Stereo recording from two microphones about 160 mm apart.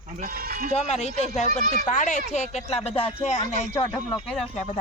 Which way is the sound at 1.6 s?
60° right (ahead or behind).